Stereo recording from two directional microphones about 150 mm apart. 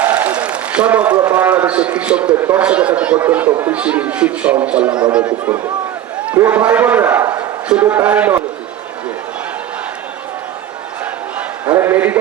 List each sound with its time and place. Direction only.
0.0 s a sound: 10° right (ahead or behind)
1.2 s a man's voice: 10° right (ahead or behind)
11.6 s a man's voice: 15° right (ahead or behind)